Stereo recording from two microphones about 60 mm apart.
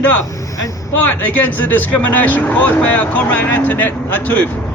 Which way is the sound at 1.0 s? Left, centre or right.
Left.